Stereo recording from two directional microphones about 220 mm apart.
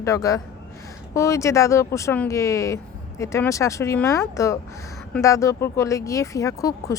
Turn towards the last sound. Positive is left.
turn(degrees=15)  # may be behind; listen again after turning